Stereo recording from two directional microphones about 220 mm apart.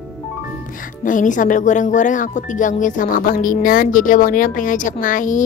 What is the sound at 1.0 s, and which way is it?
Speech, 35° left (ahead or behind).